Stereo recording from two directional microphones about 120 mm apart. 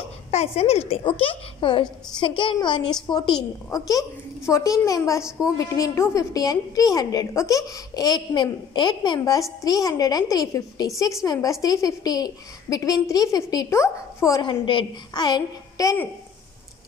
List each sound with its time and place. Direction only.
0.3 s a woman's voice: 65° left (ahead or behind)
1.0 s a woman's voice: 45° left (ahead or behind)
3.7 s a woman's voice: 30° left (ahead or behind)
11.6 s a woman's voice: 30° left (ahead or behind)
14.4 s a woman's voice: 45° left (ahead or behind)